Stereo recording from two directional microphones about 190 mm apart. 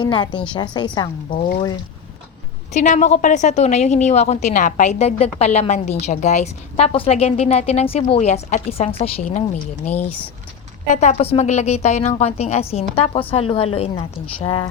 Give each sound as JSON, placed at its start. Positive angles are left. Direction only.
{"t": 0.0, "sound": "a woman's voice", "side_deg": 25}
{"t": 1.3, "sound": "speech", "side_deg": 45}
{"t": 2.7, "sound": "a woman's voice", "side_deg": 40}
{"t": 10.9, "sound": "a woman's voice", "side_deg": 40}